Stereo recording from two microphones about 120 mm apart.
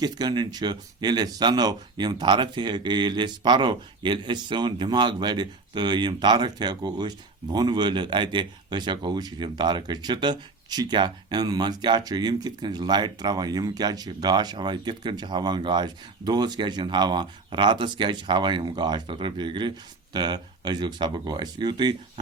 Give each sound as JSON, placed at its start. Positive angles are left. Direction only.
{"t": 0.0, "sound": "speech", "side_deg": -35}